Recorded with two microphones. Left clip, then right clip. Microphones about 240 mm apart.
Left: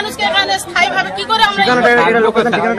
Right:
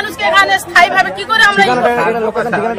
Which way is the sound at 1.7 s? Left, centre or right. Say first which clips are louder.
Left 2 dB; right.